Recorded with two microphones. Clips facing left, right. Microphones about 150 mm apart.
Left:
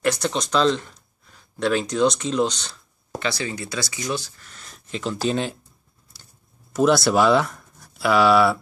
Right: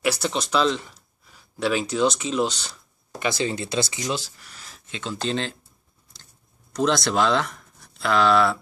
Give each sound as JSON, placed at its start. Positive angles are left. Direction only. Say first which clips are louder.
{"t": 0.0, "sound": "speech", "louder": "left 2 dB", "side_deg": -5}
{"t": 3.2, "sound": "speech", "louder": "right 2 dB", "side_deg": -20}
{"t": 4.4, "sound": "speech", "louder": "even", "side_deg": -5}
{"t": 6.7, "sound": "speech", "louder": "left 4 dB", "side_deg": 5}